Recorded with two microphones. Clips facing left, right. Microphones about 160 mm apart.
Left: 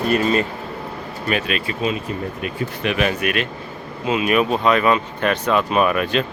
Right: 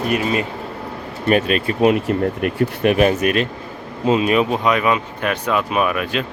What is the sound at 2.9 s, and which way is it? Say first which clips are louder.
Speech: right 5 dB; 40° right (ahead or behind).